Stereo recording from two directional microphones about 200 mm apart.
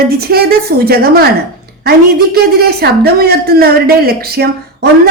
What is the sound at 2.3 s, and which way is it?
Speech, 50° right (ahead or behind).